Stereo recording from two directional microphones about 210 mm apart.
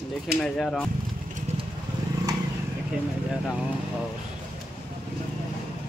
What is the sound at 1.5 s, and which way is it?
Vehicle, 30° right (ahead or behind).